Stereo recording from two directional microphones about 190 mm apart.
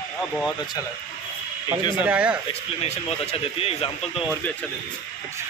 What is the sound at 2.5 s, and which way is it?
Speech, 35° left (ahead or behind).